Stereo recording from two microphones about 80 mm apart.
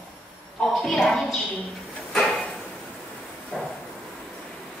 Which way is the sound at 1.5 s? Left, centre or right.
Centre.